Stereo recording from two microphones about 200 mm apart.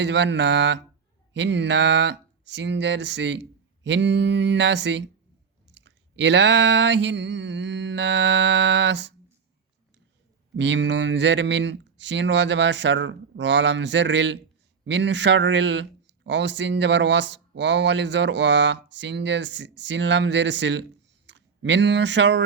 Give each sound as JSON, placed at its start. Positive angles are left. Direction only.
{"t": 0.0, "sound": "speech", "side_deg": -60}
{"t": 10.6, "sound": "speech", "side_deg": -65}